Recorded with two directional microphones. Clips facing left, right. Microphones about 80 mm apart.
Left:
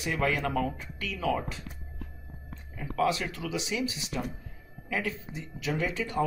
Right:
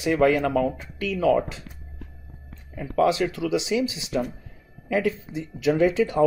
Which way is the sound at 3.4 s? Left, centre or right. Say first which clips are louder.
Right 7 dB; right.